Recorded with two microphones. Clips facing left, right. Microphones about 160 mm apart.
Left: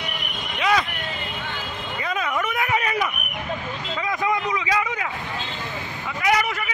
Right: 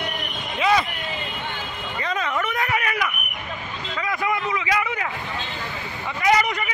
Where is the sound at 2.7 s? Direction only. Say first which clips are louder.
Left 2 dB; 25° left (ahead or behind).